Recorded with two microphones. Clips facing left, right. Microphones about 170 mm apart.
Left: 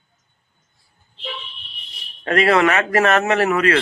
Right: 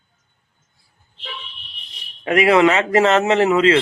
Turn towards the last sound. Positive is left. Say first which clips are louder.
# right 3 dB
turn(degrees=-20)  # may be behind; listen again after turning